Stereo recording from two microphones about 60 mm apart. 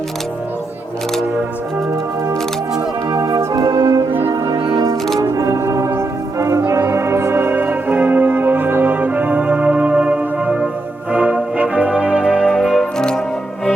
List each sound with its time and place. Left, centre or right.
3.1 s music: right
5.2 s music: right
11.1 s brass instrument: right
12.5 s music: centre
12.8 s music: centre